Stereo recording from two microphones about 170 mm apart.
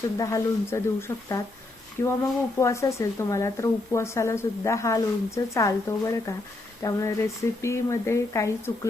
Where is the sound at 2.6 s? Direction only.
15° left (ahead or behind).